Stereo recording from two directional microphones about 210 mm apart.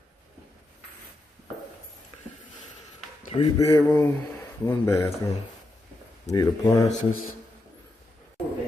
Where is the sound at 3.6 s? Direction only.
15° left (ahead or behind).